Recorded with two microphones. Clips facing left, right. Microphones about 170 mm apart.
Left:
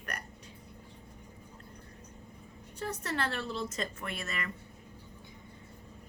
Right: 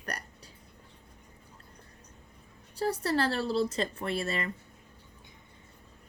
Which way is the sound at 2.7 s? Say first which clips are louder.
Right 7 dB; 35° right (ahead or behind).